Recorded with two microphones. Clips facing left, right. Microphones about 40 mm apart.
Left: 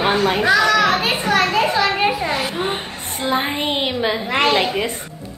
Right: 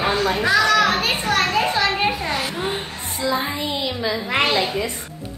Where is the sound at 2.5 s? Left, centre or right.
Left.